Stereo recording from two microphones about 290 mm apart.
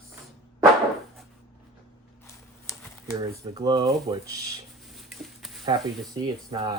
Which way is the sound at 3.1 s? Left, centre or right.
Centre.